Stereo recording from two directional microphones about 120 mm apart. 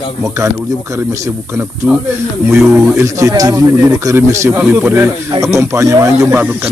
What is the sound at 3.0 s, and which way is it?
Speech, 25° right (ahead or behind).